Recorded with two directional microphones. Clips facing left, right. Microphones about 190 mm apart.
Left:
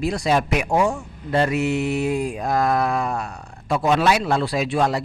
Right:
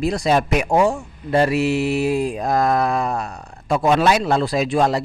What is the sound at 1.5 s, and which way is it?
Mantra, 20° left (ahead or behind).